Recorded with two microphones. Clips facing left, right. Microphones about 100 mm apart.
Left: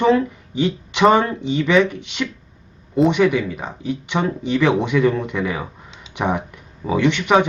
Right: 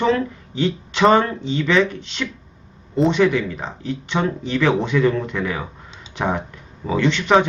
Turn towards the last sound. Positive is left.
turn(degrees=15)  # may be behind; listen again after turning